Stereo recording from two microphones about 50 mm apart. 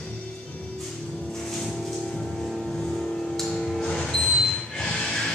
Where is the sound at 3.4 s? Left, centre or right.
Centre.